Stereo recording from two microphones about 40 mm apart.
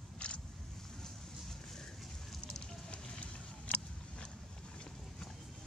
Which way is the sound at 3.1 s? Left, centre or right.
Left.